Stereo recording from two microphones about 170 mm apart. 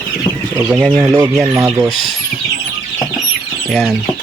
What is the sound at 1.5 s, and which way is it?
Speech, 15° right (ahead or behind).